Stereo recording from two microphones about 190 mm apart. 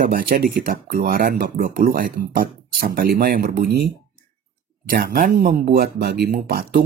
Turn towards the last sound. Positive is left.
turn(degrees=-50)  # may be behind; listen again after turning